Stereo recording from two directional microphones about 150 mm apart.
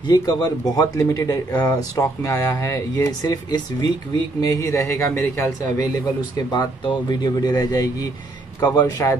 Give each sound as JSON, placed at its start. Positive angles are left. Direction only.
{"t": 0.1, "sound": "speech", "side_deg": 25}
{"t": 6.5, "sound": "speech", "side_deg": 25}